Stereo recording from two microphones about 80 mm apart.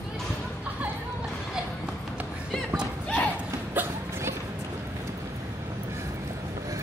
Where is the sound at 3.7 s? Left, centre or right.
Right.